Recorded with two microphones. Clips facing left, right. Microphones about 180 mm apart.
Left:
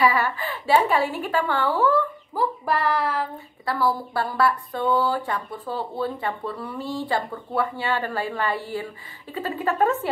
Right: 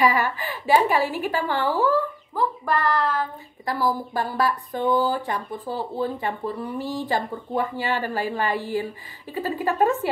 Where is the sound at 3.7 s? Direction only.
15° right (ahead or behind).